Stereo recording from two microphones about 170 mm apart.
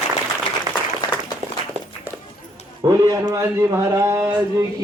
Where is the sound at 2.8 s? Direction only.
20° right (ahead or behind).